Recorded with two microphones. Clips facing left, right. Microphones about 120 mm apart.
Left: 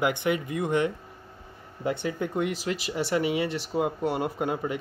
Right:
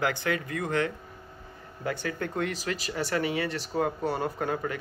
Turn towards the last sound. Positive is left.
turn(degrees=20)  # may be behind; listen again after turning